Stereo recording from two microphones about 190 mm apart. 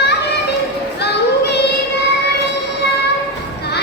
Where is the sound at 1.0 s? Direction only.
60° left (ahead or behind).